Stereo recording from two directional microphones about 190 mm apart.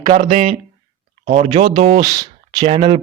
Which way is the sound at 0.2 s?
45° right (ahead or behind).